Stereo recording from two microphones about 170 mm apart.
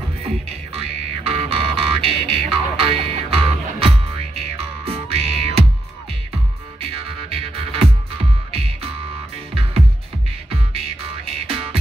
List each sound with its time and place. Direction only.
0.7 s music: 35° right (ahead or behind)
6.9 s music: 35° right (ahead or behind)
11.3 s music: 35° right (ahead or behind)